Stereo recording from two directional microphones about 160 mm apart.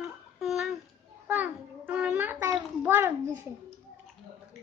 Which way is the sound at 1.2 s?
10° right (ahead or behind).